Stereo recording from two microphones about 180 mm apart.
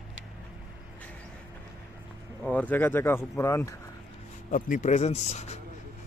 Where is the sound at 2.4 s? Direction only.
10° left (ahead or behind).